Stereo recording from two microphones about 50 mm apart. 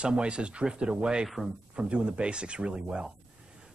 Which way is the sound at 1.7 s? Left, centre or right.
Right.